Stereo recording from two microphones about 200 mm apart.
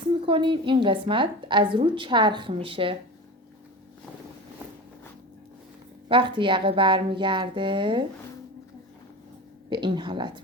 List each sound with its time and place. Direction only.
0.3 s a woman's voice: 25° right (ahead or behind)
6.1 s a woman's voice: 25° right (ahead or behind)
9.6 s a woman's voice: 25° right (ahead or behind)